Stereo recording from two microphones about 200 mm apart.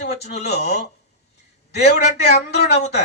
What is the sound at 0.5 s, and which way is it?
Speech, 55° left (ahead or behind).